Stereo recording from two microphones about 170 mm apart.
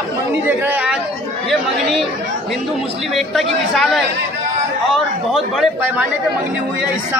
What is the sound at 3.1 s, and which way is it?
A man's voice, centre (ahead or behind).